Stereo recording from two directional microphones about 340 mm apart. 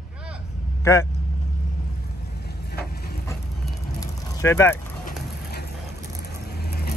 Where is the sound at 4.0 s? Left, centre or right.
Centre.